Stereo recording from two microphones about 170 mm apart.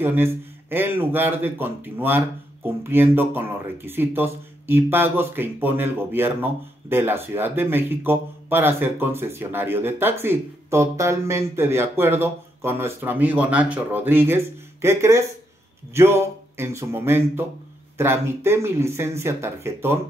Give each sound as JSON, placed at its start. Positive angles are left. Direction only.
{"t": 0.0, "sound": "speech", "side_deg": -15}